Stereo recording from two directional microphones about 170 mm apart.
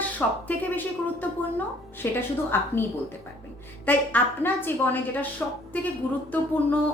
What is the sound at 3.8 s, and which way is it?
A woman's voice, 10° left (ahead or behind).